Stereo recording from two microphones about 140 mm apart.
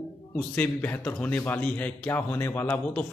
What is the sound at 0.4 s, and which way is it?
A man's voice, 10° left (ahead or behind).